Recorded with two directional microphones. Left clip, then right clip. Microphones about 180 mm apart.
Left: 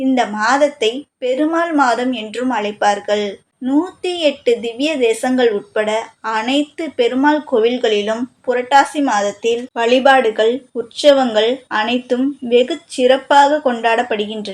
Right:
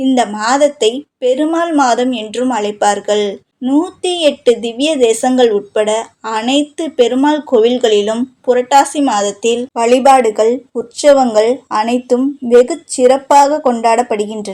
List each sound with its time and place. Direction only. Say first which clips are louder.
0.0 s speech: right 2 dB; 30° right (ahead or behind)
10.1 s speech: right 4 dB; 25° right (ahead or behind)